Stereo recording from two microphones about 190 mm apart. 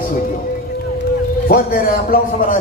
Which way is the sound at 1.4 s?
50° left (ahead or behind).